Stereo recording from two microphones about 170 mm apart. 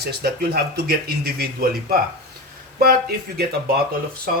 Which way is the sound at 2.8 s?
65° right (ahead or behind).